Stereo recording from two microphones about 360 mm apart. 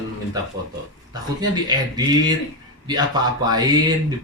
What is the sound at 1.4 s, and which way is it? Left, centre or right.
Speech, centre.